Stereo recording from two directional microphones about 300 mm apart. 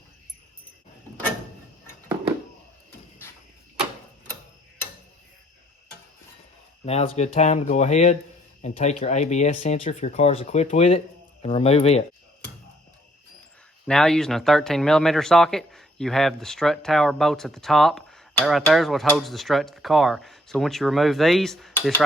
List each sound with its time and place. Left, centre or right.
6.8 s speech: centre
13.8 s speech: centre